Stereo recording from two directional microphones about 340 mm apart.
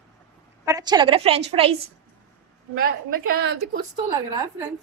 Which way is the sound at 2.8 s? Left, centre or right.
Right.